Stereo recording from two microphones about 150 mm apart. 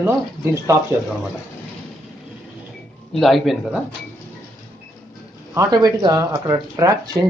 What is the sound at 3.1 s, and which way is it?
Speech, centre (ahead or behind).